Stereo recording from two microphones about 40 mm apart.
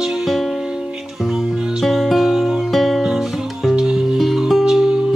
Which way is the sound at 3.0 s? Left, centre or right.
Centre.